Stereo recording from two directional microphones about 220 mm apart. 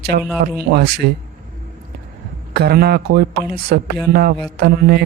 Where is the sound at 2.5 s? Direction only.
45° right (ahead or behind).